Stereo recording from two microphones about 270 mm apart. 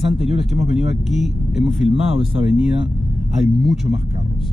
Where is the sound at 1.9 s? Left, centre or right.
Right.